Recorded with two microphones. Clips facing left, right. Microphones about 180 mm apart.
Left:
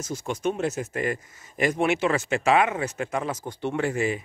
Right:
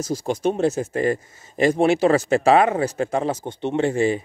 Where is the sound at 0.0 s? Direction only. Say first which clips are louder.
Right 5 dB; 35° right (ahead or behind).